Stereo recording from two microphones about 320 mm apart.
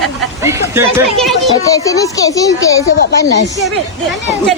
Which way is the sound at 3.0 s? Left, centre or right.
Left.